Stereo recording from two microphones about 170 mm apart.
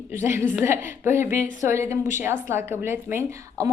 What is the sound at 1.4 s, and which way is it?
Speech, 45° left (ahead or behind).